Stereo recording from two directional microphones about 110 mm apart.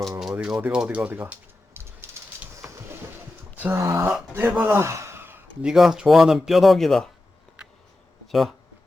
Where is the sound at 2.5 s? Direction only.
30° right (ahead or behind).